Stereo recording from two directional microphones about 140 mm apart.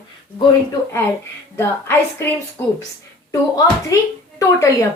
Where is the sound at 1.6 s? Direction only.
15° left (ahead or behind).